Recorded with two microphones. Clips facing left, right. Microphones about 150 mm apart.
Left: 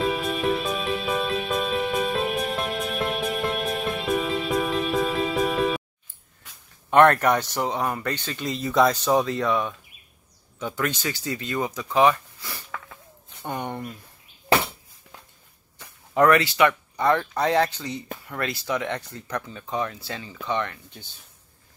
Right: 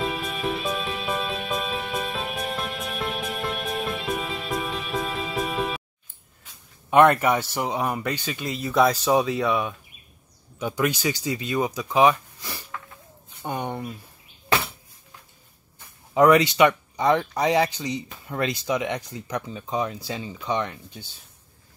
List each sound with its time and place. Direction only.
0.1 s music: centre (ahead or behind)
6.9 s speech: 5° right (ahead or behind)
16.1 s speech: 15° right (ahead or behind)